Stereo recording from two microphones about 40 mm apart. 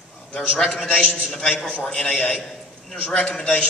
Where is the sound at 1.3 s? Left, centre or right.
Centre.